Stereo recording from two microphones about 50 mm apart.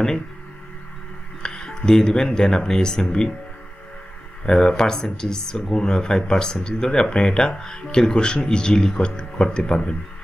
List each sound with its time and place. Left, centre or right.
1.4 s speech: centre
4.5 s speech: centre